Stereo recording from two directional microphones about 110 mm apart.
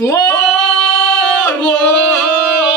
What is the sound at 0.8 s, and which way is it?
Singing, 10° left (ahead or behind).